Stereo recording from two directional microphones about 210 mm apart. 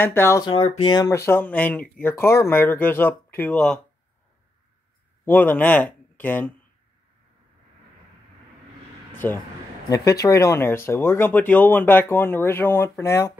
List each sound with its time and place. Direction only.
0.0 s speech: 10° left (ahead or behind)
5.2 s speech: 10° left (ahead or behind)
9.2 s speech: 10° left (ahead or behind)